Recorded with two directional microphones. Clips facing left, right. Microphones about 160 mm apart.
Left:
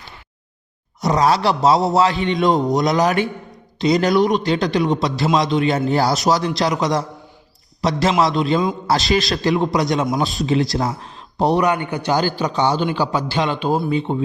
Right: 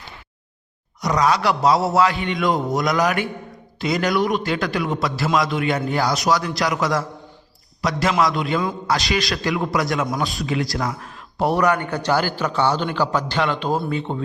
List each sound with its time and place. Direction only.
1.0 s a man's voice: 30° left (ahead or behind); by 14.2 s 15° left (ahead or behind)